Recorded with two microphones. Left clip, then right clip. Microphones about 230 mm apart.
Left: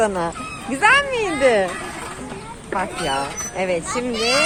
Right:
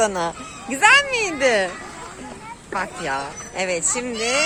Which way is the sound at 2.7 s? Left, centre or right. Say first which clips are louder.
Left 3 dB; centre.